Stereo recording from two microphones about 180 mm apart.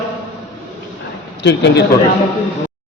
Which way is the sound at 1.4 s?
75° left (ahead or behind).